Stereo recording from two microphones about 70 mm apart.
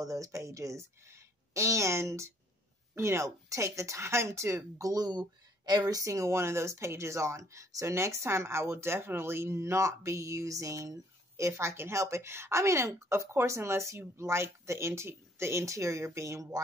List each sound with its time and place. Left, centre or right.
0.0 s speech: right
5.7 s speech: right
5.9 s speech: right